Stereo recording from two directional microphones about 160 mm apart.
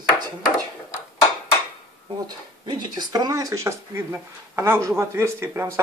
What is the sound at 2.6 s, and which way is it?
Speech, 25° right (ahead or behind).